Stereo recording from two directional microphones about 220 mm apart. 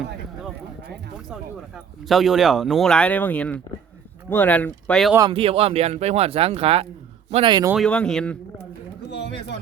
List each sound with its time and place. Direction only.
1.3 s speech: centre (ahead or behind)
5.1 s a man's voice: 20° right (ahead or behind)
7.7 s speech: 5° left (ahead or behind)
9.0 s speech: 50° left (ahead or behind)